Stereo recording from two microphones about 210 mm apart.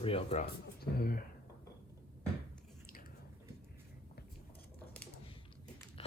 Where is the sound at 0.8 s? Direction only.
45° left (ahead or behind).